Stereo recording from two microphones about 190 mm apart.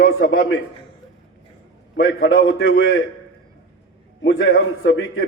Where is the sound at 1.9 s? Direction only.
90° left.